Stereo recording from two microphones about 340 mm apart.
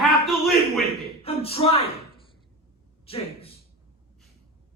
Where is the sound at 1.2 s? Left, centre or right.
Centre.